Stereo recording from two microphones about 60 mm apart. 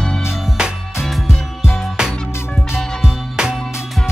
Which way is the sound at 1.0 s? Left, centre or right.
Centre.